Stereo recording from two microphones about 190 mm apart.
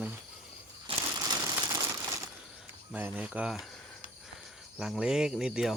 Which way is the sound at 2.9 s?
10° right (ahead or behind).